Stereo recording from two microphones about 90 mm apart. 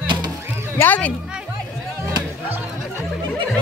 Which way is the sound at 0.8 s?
15° left (ahead or behind).